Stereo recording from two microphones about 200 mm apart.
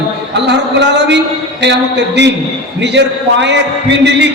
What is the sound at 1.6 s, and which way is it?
A man's voice, 60° right (ahead or behind).